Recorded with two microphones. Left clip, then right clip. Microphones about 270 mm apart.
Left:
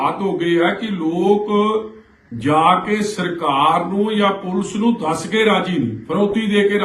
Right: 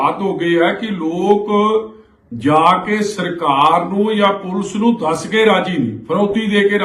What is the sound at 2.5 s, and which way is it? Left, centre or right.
A man's voice, centre.